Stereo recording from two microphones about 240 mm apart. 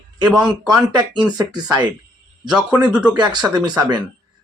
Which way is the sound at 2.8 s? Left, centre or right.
Centre.